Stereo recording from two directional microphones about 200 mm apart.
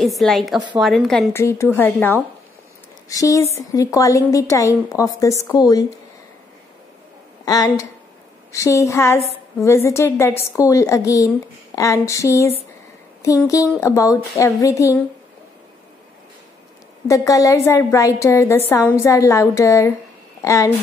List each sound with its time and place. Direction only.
0.0 s a woman's voice: centre (ahead or behind)
1.3 s a woman's voice: 15° left (ahead or behind)
7.4 s a woman's voice: 20° left (ahead or behind)
17.1 s a woman's voice: 15° left (ahead or behind)